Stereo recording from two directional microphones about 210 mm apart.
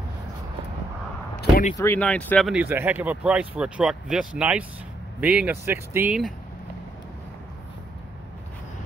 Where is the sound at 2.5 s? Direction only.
10° right (ahead or behind).